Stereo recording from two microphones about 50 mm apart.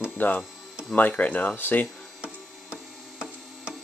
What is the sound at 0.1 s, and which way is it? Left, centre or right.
Music, left.